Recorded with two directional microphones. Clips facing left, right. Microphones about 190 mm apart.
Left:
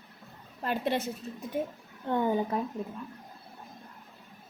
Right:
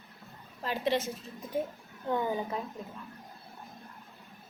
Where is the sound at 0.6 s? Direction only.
50° left (ahead or behind).